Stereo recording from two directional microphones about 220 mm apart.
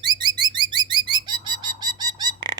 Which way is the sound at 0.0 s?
20° right (ahead or behind).